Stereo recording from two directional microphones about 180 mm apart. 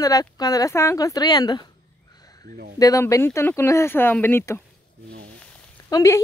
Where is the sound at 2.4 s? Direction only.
55° right (ahead or behind).